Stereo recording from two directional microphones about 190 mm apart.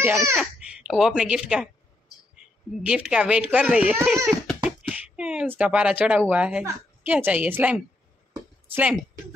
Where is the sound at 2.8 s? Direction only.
5° right (ahead or behind).